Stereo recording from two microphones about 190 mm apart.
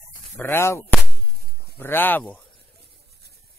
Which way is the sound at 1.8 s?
10° left (ahead or behind).